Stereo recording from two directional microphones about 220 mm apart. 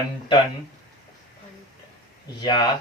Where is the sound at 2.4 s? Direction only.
20° left (ahead or behind).